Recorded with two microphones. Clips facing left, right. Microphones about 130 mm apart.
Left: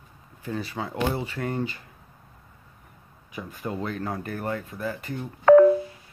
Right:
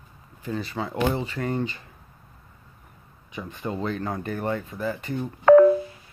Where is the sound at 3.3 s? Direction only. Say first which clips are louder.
Right 1 dB; 5° left (ahead or behind).